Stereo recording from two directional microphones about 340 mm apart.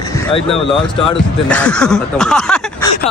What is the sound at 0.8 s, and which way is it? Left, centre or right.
Speech, centre.